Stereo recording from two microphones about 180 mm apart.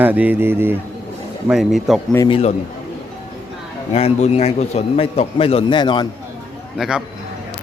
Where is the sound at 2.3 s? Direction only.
35° left (ahead or behind).